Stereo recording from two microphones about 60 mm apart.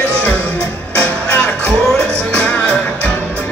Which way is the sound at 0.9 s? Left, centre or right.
Left.